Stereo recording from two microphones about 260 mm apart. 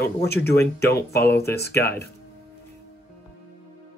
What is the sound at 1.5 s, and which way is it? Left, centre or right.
Speech, left.